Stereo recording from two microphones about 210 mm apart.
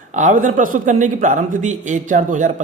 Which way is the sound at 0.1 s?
35° right (ahead or behind).